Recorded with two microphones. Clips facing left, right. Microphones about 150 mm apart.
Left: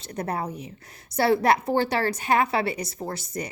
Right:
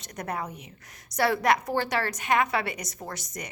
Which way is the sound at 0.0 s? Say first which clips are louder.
Left 4 dB; 30° left (ahead or behind).